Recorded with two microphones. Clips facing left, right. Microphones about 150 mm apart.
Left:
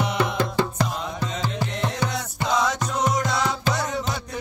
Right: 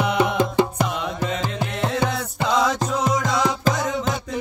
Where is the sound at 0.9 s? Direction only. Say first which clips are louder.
Right 4 dB; 90° right.